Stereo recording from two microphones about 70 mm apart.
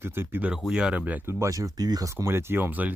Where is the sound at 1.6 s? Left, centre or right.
Right.